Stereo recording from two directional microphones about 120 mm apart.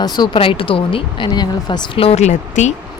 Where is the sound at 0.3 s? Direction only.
50° left (ahead or behind).